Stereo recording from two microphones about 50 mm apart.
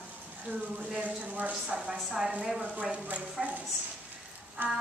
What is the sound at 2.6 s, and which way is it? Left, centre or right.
Speech, right.